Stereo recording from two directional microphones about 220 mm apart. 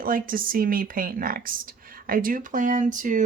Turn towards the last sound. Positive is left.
turn(degrees=-35)  # may be behind; listen again after turning